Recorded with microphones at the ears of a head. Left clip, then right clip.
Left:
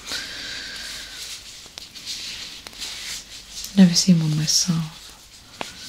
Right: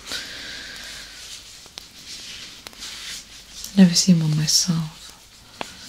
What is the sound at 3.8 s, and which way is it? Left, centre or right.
Speech, centre.